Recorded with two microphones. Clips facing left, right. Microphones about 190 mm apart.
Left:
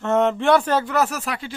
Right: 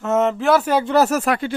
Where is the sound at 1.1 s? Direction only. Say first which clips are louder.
Right 9 dB; 50° right (ahead or behind).